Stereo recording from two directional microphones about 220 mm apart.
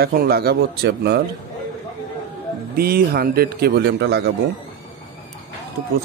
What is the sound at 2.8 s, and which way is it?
A man's voice, 45° right (ahead or behind).